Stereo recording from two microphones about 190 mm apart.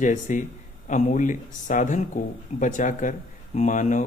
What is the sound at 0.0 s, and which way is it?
Speech, 40° left (ahead or behind).